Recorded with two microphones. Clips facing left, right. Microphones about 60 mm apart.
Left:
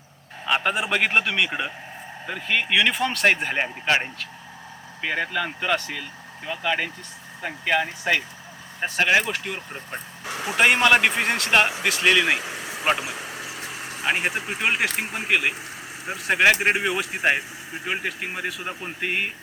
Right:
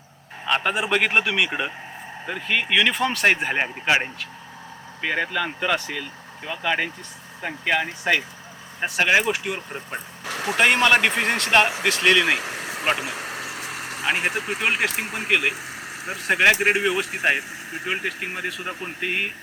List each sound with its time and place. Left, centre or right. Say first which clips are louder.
0.4 s speech: right 1 dB; centre
10.2 s a sound: right 3 dB; right
10.6 s speech: even; centre
12.4 s vehicle: right 2 dB; right
14.0 s speech: even; centre